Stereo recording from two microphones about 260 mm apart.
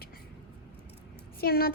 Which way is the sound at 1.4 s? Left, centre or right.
Left.